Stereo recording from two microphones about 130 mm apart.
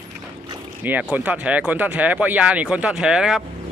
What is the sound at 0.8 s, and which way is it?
Speech, 10° right (ahead or behind).